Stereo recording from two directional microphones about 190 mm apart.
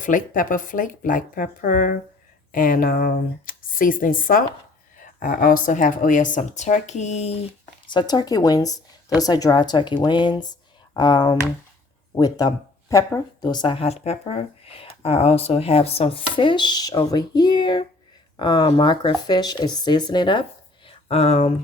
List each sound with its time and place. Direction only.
0.0 s speech: 45° left (ahead or behind)
7.9 s speech: 25° left (ahead or behind)
20.8 s a sound: 35° left (ahead or behind)